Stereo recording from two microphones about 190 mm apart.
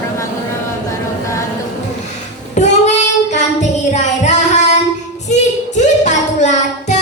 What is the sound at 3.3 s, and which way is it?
Music, 40° left (ahead or behind).